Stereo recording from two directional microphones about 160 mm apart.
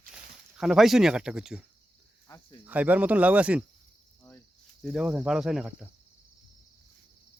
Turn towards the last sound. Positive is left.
turn(degrees=-5)  # may be behind; listen again after turning